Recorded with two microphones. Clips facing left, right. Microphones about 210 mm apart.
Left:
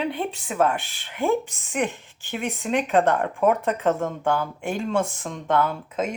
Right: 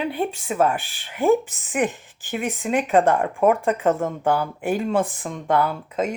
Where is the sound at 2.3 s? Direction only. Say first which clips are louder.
Right 2 dB; centre (ahead or behind).